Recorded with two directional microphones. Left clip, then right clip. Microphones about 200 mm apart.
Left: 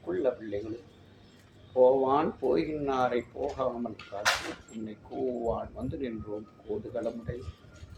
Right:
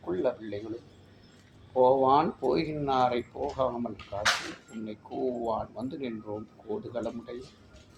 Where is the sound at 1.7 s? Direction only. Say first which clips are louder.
Right 1 dB; 25° right (ahead or behind).